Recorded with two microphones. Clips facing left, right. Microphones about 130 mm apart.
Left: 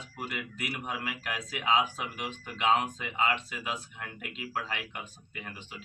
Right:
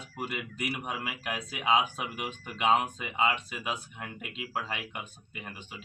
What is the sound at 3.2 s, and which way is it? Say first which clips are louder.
Speech: right 1 dB; 20° right (ahead or behind).